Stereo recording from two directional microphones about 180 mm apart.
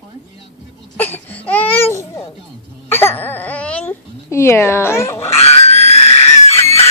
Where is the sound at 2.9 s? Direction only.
10° left (ahead or behind).